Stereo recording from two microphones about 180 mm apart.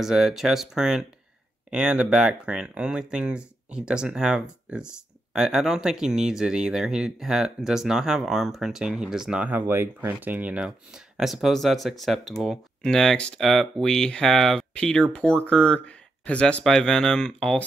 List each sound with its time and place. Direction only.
0.0 s speech: centre (ahead or behind)